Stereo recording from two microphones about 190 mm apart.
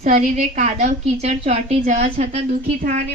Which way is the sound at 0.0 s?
35° right (ahead or behind).